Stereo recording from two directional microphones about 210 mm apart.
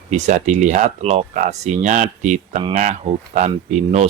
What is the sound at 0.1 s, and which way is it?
Speech, 35° right (ahead or behind).